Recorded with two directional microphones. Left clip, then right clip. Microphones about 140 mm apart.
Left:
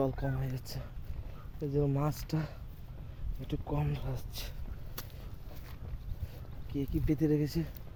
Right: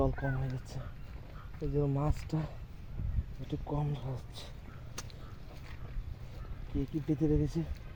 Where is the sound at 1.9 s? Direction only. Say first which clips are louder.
Left 1 dB; 5° right (ahead or behind).